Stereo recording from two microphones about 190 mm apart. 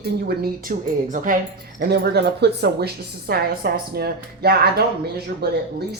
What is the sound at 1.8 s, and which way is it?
A woman's voice, 60° right (ahead or behind).